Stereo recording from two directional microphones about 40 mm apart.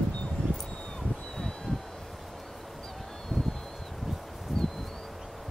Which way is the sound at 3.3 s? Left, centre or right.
Centre.